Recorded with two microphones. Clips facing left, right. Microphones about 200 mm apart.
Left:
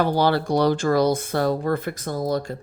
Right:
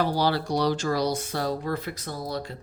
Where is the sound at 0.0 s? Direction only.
55° left (ahead or behind).